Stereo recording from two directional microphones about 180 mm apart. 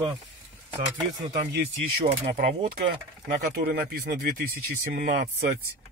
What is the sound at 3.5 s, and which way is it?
Speech, 55° right (ahead or behind).